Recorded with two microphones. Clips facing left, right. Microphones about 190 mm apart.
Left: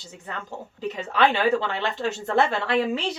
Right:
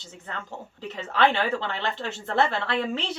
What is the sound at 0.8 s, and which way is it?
Speech, 15° left (ahead or behind).